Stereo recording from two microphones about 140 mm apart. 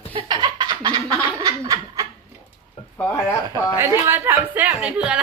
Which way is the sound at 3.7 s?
15° right (ahead or behind).